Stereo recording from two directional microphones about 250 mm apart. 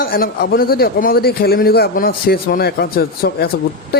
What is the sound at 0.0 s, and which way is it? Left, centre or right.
Speech, left.